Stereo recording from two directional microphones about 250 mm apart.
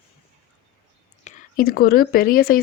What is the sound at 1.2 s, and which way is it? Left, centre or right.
Speech, left.